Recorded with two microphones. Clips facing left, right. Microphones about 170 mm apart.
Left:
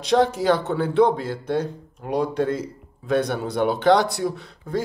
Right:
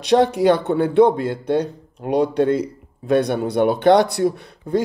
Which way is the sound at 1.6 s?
70° right (ahead or behind).